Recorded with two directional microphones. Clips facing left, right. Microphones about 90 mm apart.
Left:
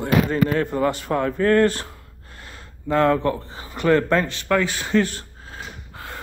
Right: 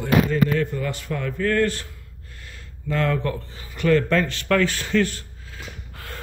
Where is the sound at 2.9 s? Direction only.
30° left (ahead or behind).